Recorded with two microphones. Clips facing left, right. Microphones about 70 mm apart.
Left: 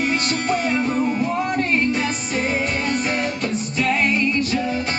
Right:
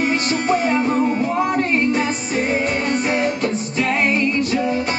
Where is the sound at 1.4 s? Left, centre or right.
Centre.